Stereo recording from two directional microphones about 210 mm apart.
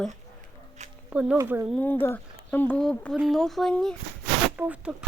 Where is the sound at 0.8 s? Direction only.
35° right (ahead or behind).